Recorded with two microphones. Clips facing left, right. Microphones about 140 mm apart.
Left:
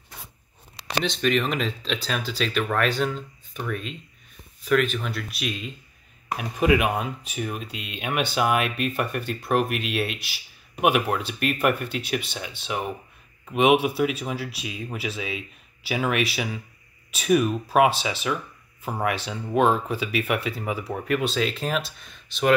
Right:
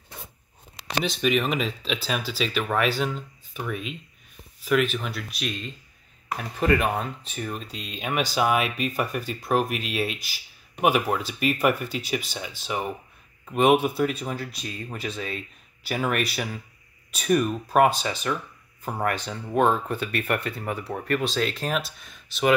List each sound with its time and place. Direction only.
1.0 s speech: 5° right (ahead or behind)